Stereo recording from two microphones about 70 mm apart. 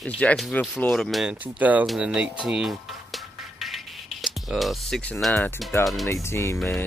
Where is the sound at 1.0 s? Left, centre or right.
Centre.